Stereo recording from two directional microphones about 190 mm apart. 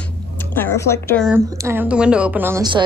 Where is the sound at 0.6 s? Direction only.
15° left (ahead or behind).